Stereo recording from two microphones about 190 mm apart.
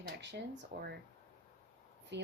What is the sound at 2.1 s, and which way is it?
Speech, 65° right (ahead or behind).